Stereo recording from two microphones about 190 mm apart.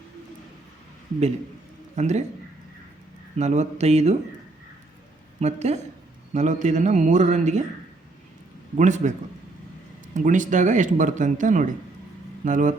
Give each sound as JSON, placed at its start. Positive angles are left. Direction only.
{"t": 2.0, "sound": "speech", "side_deg": -35}
{"t": 3.3, "sound": "speech", "side_deg": -35}
{"t": 5.4, "sound": "speech", "side_deg": -35}
{"t": 8.7, "sound": "speech", "side_deg": -40}
{"t": 10.2, "sound": "speech", "side_deg": -40}